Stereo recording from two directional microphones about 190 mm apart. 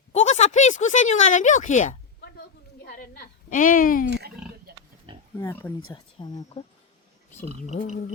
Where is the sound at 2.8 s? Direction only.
50° left (ahead or behind).